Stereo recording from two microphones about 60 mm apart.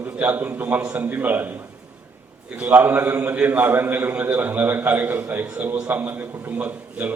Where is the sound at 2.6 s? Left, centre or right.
Right.